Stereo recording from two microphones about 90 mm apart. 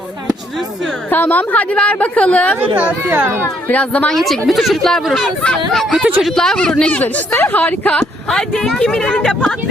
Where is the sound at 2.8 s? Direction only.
20° right (ahead or behind).